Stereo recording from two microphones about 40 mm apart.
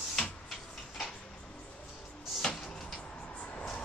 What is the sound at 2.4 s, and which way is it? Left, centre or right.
Tick-tock, centre.